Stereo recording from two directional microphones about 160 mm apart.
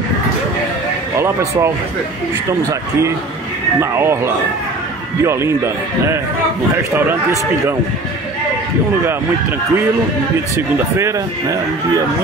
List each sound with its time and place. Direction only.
1.1 s speech: 20° right (ahead or behind)
3.8 s speech: 15° right (ahead or behind)
5.2 s speech: 15° right (ahead or behind)
10.5 s speech: 20° right (ahead or behind)